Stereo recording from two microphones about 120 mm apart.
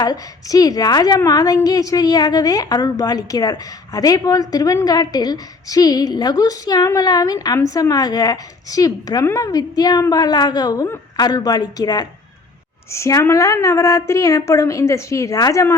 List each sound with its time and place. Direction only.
0.0 s a woman's voice: 30° left (ahead or behind)